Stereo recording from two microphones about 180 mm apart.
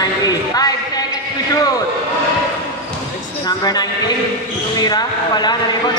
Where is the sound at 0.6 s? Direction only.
20° left (ahead or behind).